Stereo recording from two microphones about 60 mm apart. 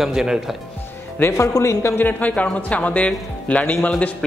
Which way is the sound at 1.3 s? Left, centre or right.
Left.